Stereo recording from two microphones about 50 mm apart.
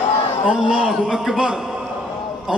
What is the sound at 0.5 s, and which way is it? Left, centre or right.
A man's voice, centre.